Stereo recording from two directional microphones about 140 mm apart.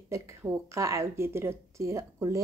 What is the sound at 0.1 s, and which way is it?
A woman's voice, 20° right (ahead or behind).